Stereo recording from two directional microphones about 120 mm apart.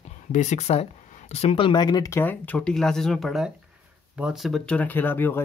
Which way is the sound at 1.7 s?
35° left (ahead or behind).